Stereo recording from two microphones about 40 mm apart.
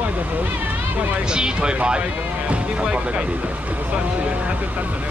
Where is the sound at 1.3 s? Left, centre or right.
Right.